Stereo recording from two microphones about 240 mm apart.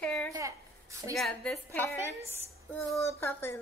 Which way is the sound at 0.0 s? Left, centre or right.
Centre.